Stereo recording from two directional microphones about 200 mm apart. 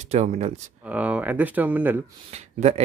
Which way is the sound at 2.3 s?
35° right (ahead or behind).